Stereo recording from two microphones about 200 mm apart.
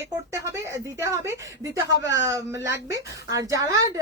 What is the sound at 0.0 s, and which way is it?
A woman's voice, 15° right (ahead or behind).